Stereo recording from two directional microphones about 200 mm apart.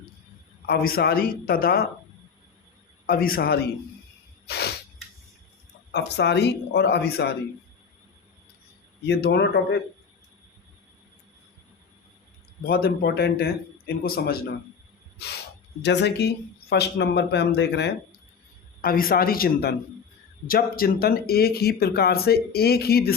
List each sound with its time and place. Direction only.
0.7 s speech: 50° left (ahead or behind)
3.1 s speech: 50° left (ahead or behind)
4.4 s a sound: 55° left (ahead or behind)
5.9 s speech: 60° left (ahead or behind)
9.0 s speech: 55° left (ahead or behind)
12.6 s speech: 50° left (ahead or behind)
15.8 s speech: 60° left (ahead or behind)
18.8 s speech: 45° left (ahead or behind)